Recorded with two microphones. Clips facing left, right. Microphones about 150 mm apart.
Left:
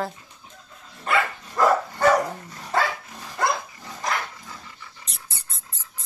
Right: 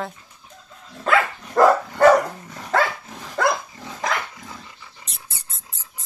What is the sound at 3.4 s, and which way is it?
Dog, 90° right.